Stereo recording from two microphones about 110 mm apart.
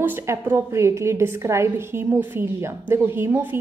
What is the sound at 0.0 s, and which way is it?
A woman's voice, 20° right (ahead or behind).